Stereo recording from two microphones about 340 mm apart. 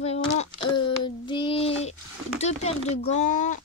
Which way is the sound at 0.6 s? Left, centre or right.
Centre.